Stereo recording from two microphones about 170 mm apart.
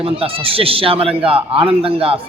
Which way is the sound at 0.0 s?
35° right (ahead or behind).